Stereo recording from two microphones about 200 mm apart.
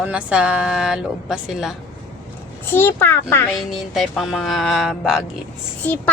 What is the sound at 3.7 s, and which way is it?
Speech, centre (ahead or behind).